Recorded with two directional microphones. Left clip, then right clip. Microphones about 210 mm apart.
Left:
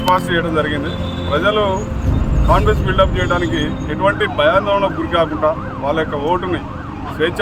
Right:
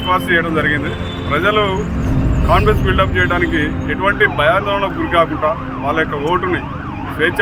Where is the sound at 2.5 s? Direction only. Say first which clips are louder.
Right 1 dB; 10° left (ahead or behind).